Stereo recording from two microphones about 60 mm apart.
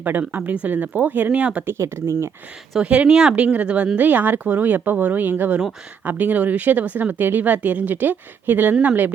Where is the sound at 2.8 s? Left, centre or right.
Centre.